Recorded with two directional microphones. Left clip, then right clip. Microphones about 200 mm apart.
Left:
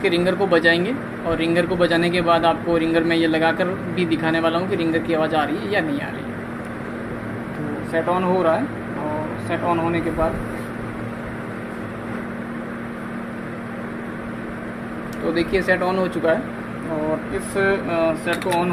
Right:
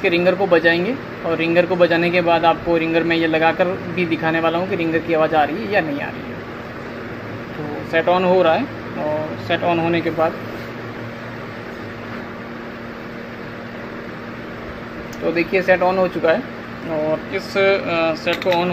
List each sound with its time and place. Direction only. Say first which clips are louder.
0.0 s speech: right 3 dB; centre (ahead or behind)
7.9 s speech: right 5 dB; 25° right (ahead or behind)
15.5 s speech: right 5 dB; 5° right (ahead or behind)
17.6 s speech: right 3 dB; 20° right (ahead or behind)